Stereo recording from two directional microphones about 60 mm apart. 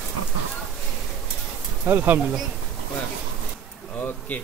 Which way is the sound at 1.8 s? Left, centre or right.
Right.